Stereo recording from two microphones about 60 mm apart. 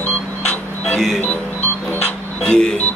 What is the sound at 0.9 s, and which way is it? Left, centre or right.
Speech, centre.